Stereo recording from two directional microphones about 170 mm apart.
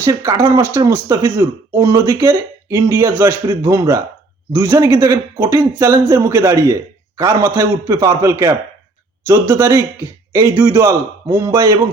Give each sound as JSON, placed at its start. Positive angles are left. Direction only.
{"t": 0.0, "sound": "speech", "side_deg": -20}